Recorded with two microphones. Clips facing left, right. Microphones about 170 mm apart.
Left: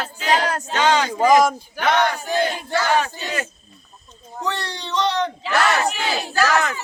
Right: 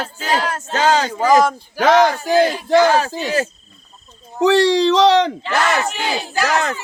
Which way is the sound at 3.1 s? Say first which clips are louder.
Right 8 dB; 90° right.